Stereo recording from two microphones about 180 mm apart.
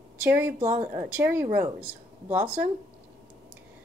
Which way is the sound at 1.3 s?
25° right (ahead or behind).